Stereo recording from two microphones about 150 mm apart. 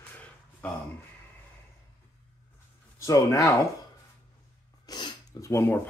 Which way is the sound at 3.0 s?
20° left (ahead or behind).